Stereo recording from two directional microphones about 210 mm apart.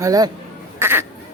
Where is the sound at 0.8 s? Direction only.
10° right (ahead or behind).